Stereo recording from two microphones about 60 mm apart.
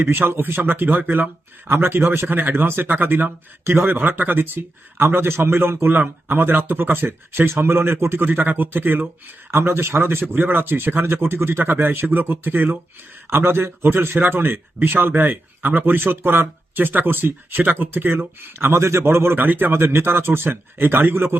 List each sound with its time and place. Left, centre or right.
0.0 s a man's voice: right
13.3 s speech: right
18.8 s a man's voice: right